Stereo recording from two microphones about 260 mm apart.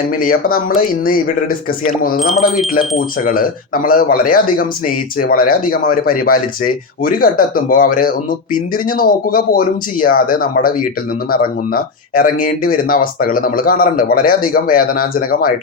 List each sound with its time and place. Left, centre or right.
0.2 s speech: left
2.1 s speech: centre
2.9 s speech: left